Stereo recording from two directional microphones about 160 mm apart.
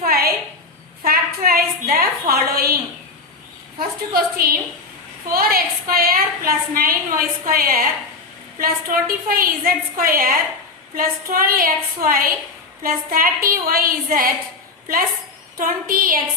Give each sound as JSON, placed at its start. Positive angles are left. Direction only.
{"t": 0.0, "sound": "a sound", "side_deg": -75}
{"t": 3.8, "sound": "a woman's voice", "side_deg": -70}
{"t": 15.5, "sound": "a woman's voice", "side_deg": -60}